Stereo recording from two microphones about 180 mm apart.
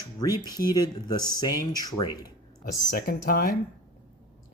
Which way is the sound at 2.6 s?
55° left (ahead or behind).